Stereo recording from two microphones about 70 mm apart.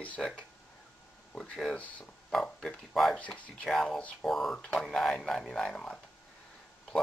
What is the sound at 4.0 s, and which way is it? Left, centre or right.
Speech, centre.